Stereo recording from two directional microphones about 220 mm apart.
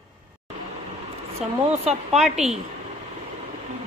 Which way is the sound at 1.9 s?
30° right (ahead or behind).